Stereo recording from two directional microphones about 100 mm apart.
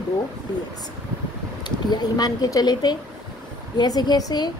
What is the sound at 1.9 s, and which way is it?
A woman's voice, 40° left (ahead or behind).